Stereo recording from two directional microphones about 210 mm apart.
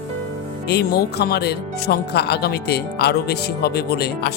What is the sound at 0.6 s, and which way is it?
Speech, 50° left (ahead or behind).